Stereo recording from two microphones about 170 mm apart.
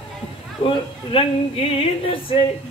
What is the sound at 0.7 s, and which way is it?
Speech, 35° left (ahead or behind).